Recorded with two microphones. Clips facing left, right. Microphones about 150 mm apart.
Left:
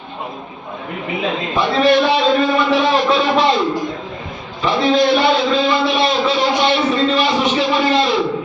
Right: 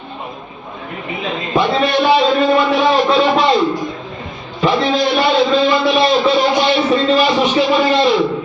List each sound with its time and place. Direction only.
1.6 s a man's voice: centre (ahead or behind)
2.4 s speech: 25° right (ahead or behind)
2.6 s a sound: centre (ahead or behind)
4.7 s a man's voice: centre (ahead or behind)